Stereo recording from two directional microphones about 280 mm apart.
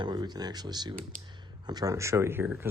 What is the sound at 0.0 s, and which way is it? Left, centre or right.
Speech, centre.